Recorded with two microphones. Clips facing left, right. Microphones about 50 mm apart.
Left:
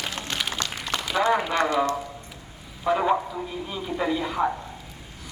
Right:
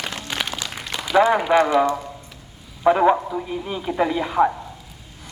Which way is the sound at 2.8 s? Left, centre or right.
Right.